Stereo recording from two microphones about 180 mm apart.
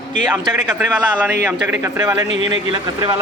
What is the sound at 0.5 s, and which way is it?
A woman's voice, 10° right (ahead or behind).